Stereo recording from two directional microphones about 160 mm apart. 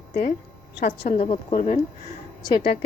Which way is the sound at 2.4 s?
30° left (ahead or behind).